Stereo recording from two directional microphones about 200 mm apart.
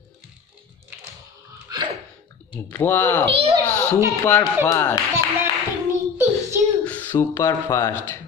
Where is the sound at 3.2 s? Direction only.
25° right (ahead or behind).